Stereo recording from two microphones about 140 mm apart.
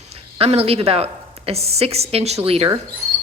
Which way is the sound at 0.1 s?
45° right (ahead or behind).